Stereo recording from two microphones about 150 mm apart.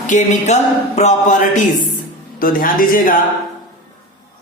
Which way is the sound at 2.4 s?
70° left (ahead or behind).